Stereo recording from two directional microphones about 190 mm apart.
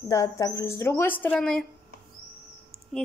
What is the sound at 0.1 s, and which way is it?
Speech, 15° left (ahead or behind).